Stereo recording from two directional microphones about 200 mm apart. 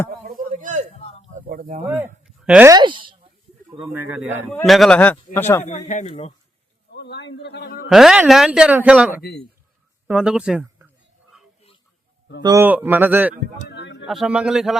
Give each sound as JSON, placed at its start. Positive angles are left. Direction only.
{"t": 0.3, "sound": "chop", "side_deg": -40}
{"t": 1.3, "sound": "a sound", "side_deg": -45}
{"t": 2.2, "sound": "a sound", "side_deg": -5}
{"t": 2.6, "sound": "speech", "side_deg": -20}
{"t": 3.9, "sound": "speech", "side_deg": -10}
{"t": 5.6, "sound": "speech", "side_deg": 35}
{"t": 6.9, "sound": "a man's voice", "side_deg": 60}
{"t": 7.9, "sound": "speech", "side_deg": 0}
{"t": 9.2, "sound": "speech", "side_deg": 55}
{"t": 10.1, "sound": "a sound", "side_deg": -5}
{"t": 12.4, "sound": "a man's voice", "side_deg": -15}
{"t": 13.7, "sound": "a sound", "side_deg": 60}
{"t": 14.1, "sound": "speech", "side_deg": -5}